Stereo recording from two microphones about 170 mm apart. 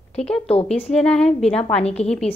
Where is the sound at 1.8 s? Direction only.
40° left (ahead or behind).